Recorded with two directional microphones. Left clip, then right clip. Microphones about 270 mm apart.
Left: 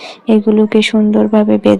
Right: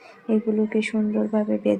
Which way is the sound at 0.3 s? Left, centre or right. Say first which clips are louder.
Left 12 dB; left.